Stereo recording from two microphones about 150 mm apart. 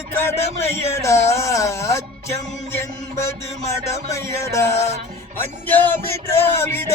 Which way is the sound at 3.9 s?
20° left (ahead or behind).